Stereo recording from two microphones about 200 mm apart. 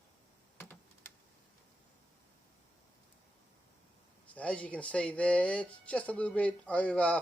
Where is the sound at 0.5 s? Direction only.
10° left (ahead or behind).